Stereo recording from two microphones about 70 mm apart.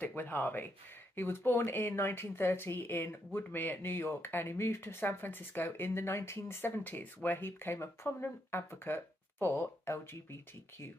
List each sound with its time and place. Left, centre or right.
0.0 s speech: left